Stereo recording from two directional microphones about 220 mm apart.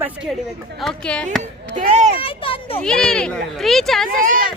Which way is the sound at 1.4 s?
35° right (ahead or behind).